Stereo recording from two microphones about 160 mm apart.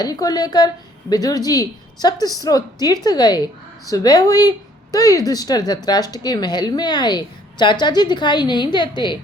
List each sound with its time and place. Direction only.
0.0 s a woman's voice: 25° left (ahead or behind)